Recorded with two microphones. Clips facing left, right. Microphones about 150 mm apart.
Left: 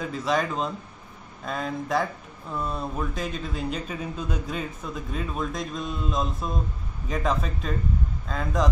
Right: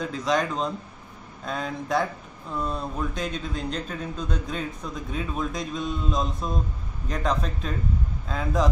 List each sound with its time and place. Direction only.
0.0 s speech: 5° left (ahead or behind)